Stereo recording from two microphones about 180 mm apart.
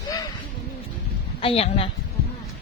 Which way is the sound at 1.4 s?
30° left (ahead or behind).